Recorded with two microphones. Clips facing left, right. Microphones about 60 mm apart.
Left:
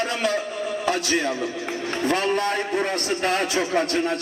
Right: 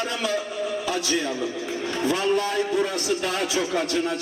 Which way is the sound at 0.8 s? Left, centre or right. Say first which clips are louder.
Left 5 dB; left.